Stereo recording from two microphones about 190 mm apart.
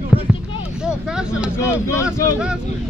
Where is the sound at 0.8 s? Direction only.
5° right (ahead or behind).